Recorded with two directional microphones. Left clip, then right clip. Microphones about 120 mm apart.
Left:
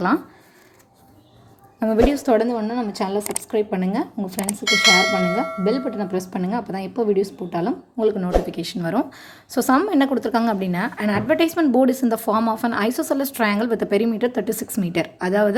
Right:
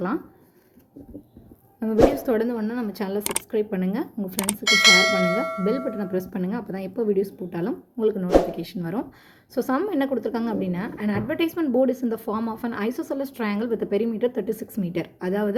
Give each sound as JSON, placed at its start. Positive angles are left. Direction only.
{"t": 1.8, "sound": "a woman's voice", "side_deg": 40}
{"t": 2.1, "sound": "speech", "side_deg": 20}
{"t": 2.5, "sound": "bell", "side_deg": 5}
{"t": 3.5, "sound": "speech", "side_deg": 20}
{"t": 4.4, "sound": "bell", "side_deg": 0}
{"t": 8.5, "sound": "a woman's voice", "side_deg": 30}